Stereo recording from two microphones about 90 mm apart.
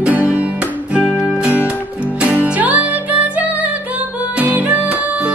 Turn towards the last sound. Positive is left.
turn(degrees=-15)  # may be behind; listen again after turning